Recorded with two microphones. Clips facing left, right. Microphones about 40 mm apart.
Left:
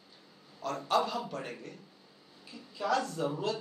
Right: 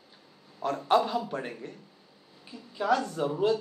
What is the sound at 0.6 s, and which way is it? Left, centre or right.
Speech, right.